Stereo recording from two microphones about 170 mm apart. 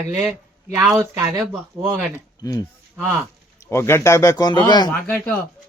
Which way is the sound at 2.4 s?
20° left (ahead or behind).